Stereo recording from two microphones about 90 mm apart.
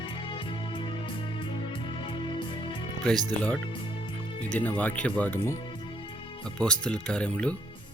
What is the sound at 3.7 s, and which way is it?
Music, 75° left (ahead or behind).